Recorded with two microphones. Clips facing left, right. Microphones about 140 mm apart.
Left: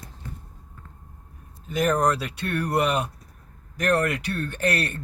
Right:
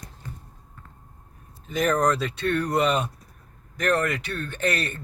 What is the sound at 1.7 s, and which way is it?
Speech, 5° left (ahead or behind).